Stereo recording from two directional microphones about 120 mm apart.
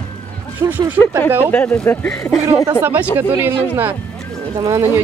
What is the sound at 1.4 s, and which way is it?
Speech, 15° left (ahead or behind).